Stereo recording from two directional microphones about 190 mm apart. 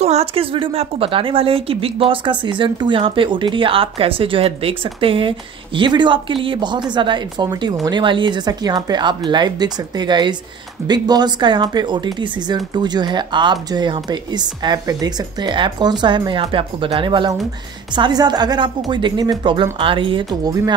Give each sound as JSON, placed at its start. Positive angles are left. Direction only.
{"t": 0.0, "sound": "speech", "side_deg": -35}